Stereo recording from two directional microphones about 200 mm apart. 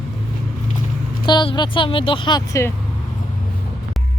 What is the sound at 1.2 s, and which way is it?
Speech, 25° left (ahead or behind).